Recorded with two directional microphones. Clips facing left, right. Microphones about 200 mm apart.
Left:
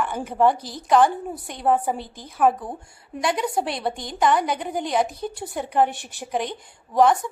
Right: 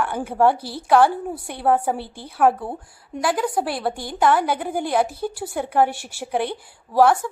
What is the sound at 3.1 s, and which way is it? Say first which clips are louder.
A woman's voice: right 2 dB; centre (ahead or behind).